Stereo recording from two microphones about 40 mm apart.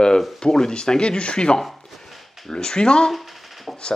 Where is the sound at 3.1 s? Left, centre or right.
Centre.